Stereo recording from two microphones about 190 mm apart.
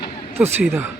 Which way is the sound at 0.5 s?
10° right (ahead or behind).